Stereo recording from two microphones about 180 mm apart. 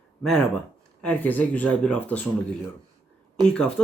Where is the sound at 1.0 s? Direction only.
10° left (ahead or behind).